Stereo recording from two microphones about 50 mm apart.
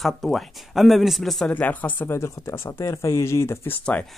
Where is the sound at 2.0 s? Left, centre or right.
Left.